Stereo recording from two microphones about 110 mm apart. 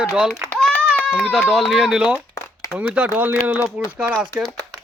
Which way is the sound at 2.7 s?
10° right (ahead or behind).